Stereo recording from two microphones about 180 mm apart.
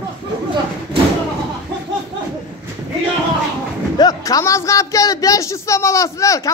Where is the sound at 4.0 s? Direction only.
20° left (ahead or behind).